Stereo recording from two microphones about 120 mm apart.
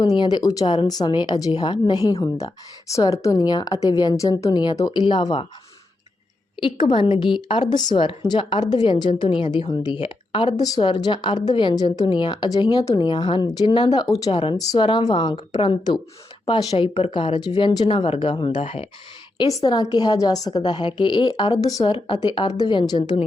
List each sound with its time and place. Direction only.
0.0 s a woman's voice: 35° left (ahead or behind)
5.0 s speech: 40° left (ahead or behind)
6.6 s a woman's voice: 40° left (ahead or behind)
16.7 s speech: 55° left (ahead or behind)
19.4 s a woman's voice: 30° left (ahead or behind)
21.9 s a woman's voice: 45° left (ahead or behind)